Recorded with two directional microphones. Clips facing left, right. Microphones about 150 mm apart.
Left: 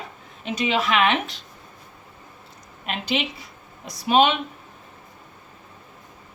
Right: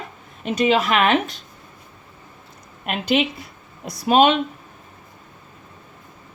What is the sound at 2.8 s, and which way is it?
A woman's voice, 55° right (ahead or behind).